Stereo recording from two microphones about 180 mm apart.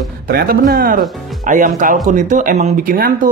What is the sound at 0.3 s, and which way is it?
Speech, 55° right (ahead or behind).